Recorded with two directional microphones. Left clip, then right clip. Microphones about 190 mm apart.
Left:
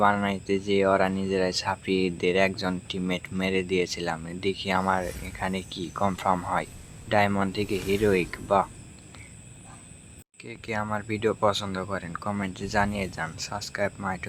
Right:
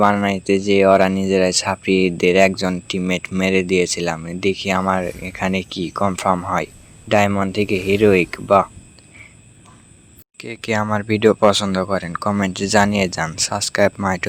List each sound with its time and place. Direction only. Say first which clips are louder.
0.0 s speech: right 7 dB; 35° right (ahead or behind)
5.0 s speech: right 9 dB; centre (ahead or behind)
5.3 s speech: right 9 dB; 35° right (ahead or behind)
10.3 s speech: right 10 dB; 40° right (ahead or behind)